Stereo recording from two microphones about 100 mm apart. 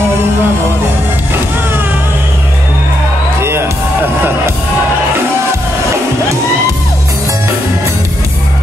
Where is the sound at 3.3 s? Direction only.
25° right (ahead or behind).